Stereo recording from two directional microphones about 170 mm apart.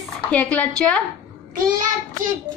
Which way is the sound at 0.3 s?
10° left (ahead or behind).